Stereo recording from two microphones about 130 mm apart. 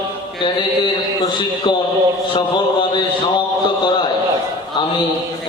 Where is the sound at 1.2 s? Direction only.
35° left (ahead or behind).